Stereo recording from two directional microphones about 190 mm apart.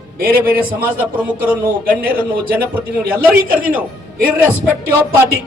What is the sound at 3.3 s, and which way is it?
Speech, 50° right (ahead or behind).